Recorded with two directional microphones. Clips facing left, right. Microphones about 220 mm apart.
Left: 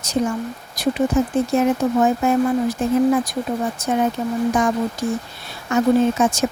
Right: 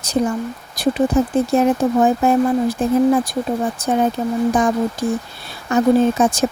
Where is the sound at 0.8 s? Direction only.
35° right (ahead or behind).